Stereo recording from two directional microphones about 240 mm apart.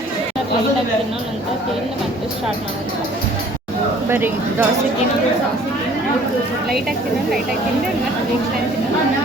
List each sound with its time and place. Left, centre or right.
4.1 s speech: centre